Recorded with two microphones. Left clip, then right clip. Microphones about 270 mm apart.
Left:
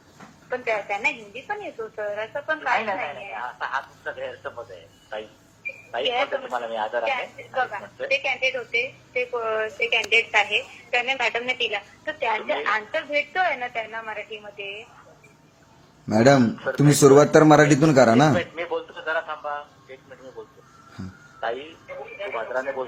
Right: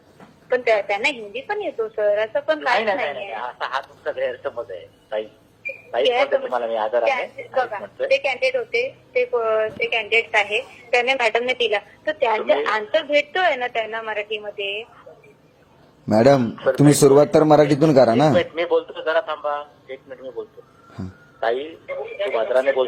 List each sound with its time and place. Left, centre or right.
0.5 s a woman's voice: right; by 10.7 s centre
10.9 s a man's voice: right
16.0 s a man's voice: centre
17.9 s speech: centre
18.2 s a man's voice: centre
21.4 s a woman's voice: right